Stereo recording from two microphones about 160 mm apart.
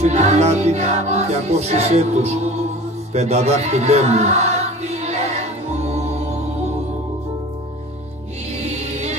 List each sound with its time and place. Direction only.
0.0 s music: 45° right (ahead or behind)
3.1 s speech: 40° right (ahead or behind)
5.7 s music: 40° right (ahead or behind)
8.6 s music: 45° right (ahead or behind)